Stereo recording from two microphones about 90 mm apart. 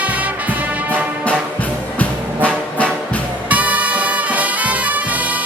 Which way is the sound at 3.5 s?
15° right (ahead or behind).